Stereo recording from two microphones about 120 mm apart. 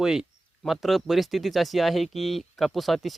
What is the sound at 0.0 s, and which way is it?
Speech, 5° right (ahead or behind).